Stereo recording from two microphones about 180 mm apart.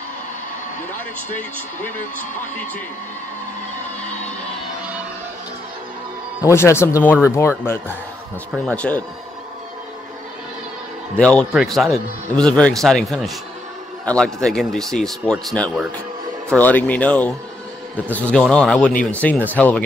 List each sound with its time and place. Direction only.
6.4 s speech: 15° left (ahead or behind)
7.0 s speech: 10° right (ahead or behind)
7.2 s speech: 15° left (ahead or behind)
11.1 s a man's voice: 5° left (ahead or behind)
18.5 s speech: 5° left (ahead or behind)